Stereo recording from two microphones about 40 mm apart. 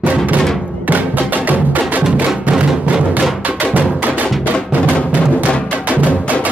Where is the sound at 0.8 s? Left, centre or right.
Right.